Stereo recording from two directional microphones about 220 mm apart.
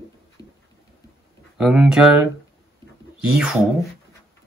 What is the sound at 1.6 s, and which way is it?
Speech, 5° right (ahead or behind).